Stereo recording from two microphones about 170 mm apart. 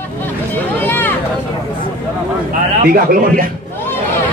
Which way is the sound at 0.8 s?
10° left (ahead or behind).